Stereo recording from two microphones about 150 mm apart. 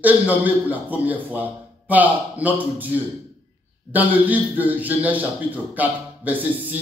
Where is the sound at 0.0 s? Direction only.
10° right (ahead or behind).